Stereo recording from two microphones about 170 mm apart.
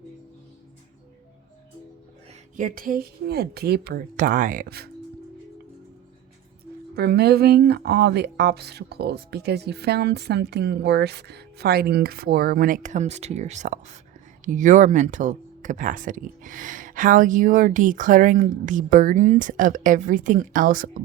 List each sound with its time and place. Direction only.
2.6 s speech: 55° right (ahead or behind)
6.9 s speech: 65° right (ahead or behind)